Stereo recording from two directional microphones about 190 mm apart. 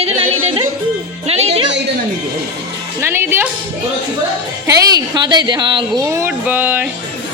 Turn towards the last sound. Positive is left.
turn(degrees=-10)  # may be behind; listen again after turning